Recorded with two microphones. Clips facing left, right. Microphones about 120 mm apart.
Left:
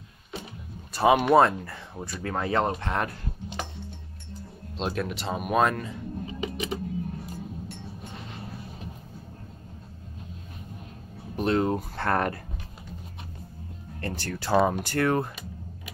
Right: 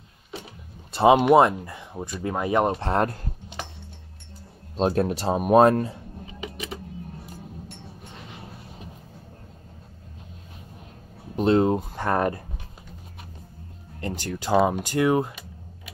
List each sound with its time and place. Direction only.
0.9 s speech: 25° right (ahead or behind)
2.8 s speech: 35° right (ahead or behind)
4.7 s speech: 40° right (ahead or behind)
6.4 s a sound: centre (ahead or behind)
11.3 s speech: 25° right (ahead or behind)
14.0 s speech: 15° right (ahead or behind)